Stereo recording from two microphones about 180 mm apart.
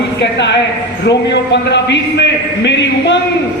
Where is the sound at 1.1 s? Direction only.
70° left (ahead or behind).